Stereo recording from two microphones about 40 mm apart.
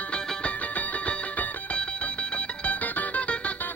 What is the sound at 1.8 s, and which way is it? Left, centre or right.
Music, left.